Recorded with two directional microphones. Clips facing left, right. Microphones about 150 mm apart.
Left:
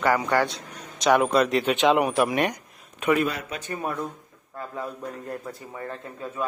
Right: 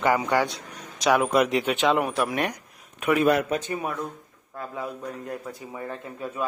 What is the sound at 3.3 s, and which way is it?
Speech, 60° right (ahead or behind).